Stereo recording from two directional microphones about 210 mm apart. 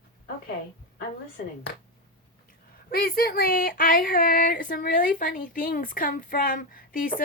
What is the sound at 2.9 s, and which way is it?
Speech, 45° left (ahead or behind).